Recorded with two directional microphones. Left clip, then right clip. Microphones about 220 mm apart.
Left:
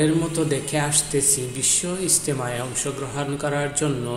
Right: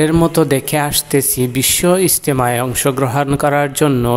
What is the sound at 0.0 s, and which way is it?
Speech, 45° right (ahead or behind).